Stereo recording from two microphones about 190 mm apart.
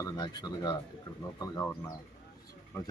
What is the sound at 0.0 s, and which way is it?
Speech, 20° left (ahead or behind).